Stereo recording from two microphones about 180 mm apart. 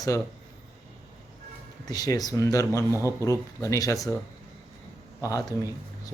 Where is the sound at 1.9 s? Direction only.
20° left (ahead or behind).